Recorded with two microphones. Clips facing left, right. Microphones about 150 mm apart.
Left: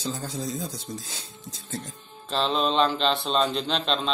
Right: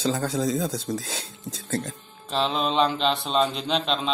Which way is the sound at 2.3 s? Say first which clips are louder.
Even; 10° right (ahead or behind).